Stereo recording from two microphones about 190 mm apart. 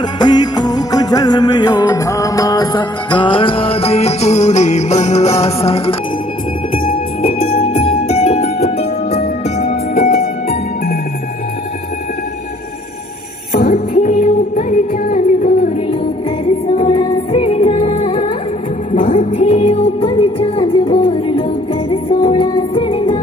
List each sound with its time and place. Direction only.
0.2 s music: 20° left (ahead or behind)
7.2 s music: 30° left (ahead or behind)
13.5 s music: 45° left (ahead or behind); by 18.3 s 30° left (ahead or behind)
18.9 s music: 40° left (ahead or behind)